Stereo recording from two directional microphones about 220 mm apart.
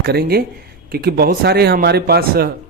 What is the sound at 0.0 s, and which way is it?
Speech, 45° right (ahead or behind).